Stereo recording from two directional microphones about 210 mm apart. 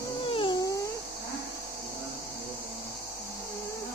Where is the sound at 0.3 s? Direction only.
25° left (ahead or behind).